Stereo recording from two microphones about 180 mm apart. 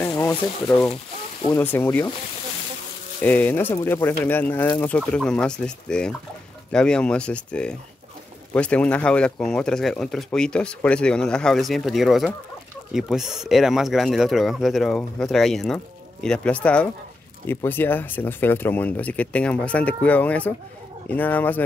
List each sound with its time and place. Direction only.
0.0 s speech: 20° left (ahead or behind)
3.2 s speech: 10° left (ahead or behind)